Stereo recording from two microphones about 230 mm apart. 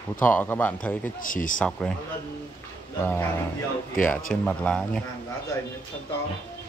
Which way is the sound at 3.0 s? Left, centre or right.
Centre.